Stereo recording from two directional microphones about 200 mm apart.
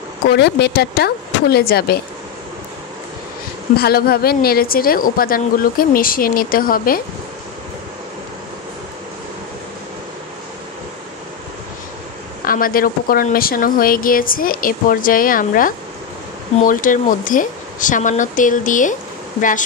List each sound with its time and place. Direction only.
0.3 s a woman's voice: 55° left (ahead or behind)
3.7 s a woman's voice: 50° left (ahead or behind)
12.4 s a woman's voice: 45° left (ahead or behind)